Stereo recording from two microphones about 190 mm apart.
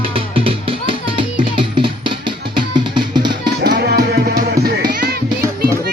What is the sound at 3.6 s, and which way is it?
Music, 55° right (ahead or behind).